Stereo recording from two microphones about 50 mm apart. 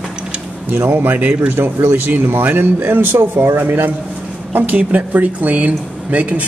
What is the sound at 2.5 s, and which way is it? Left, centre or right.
A man's voice, right.